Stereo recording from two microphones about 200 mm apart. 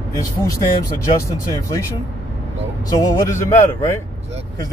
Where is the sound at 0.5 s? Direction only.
15° left (ahead or behind).